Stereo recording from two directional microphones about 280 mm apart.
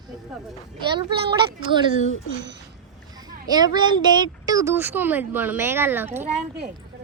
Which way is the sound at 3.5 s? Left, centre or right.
Centre.